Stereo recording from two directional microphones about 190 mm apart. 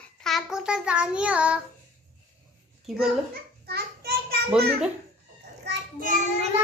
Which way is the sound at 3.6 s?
55° right (ahead or behind).